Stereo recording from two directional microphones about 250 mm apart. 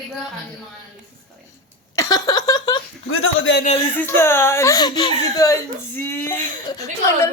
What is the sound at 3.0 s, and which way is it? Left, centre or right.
Speech, left.